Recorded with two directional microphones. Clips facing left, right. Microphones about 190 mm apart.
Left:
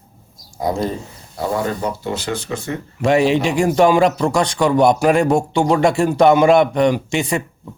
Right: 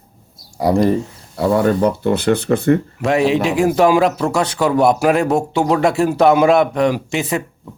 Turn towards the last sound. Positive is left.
turn(degrees=0)  # may be behind; listen again after turning